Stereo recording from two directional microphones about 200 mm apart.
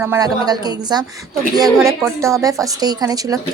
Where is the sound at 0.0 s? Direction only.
15° right (ahead or behind).